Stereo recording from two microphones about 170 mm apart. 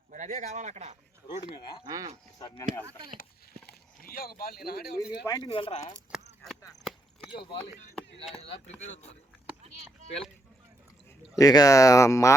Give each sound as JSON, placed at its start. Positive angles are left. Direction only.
{"t": 0.1, "sound": "speech", "side_deg": -45}
{"t": 1.8, "sound": "speech", "side_deg": -20}
{"t": 3.7, "sound": "speech", "side_deg": 60}
{"t": 5.2, "sound": "speech", "side_deg": 20}
{"t": 5.5, "sound": "speech", "side_deg": 30}
{"t": 6.1, "sound": "chop", "side_deg": -5}
{"t": 8.8, "sound": "speech", "side_deg": 40}
{"t": 11.3, "sound": "speech", "side_deg": 20}